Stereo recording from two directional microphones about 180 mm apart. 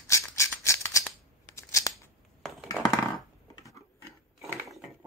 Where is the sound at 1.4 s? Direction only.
15° left (ahead or behind).